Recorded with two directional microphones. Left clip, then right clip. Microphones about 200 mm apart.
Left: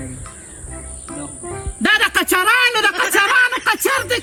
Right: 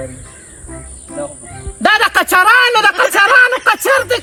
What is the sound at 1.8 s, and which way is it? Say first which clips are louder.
Music: right 4 dB; 15° left (ahead or behind).